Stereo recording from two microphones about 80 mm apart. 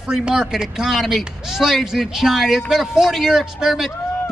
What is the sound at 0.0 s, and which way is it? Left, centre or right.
A man's voice, centre.